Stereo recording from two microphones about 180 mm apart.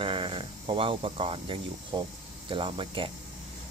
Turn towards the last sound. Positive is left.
turn(degrees=-30)  # may be behind; listen again after turning